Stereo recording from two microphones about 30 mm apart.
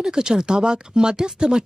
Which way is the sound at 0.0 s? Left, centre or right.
Right.